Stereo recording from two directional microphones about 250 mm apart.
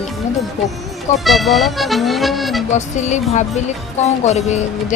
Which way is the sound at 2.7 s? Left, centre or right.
Left.